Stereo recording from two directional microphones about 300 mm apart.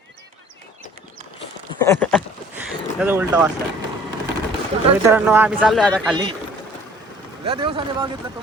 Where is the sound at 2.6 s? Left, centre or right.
Centre.